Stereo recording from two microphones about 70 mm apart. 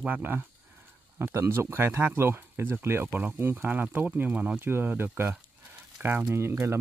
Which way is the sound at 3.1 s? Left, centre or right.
Right.